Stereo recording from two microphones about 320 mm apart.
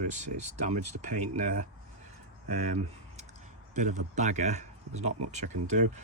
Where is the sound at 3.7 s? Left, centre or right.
Right.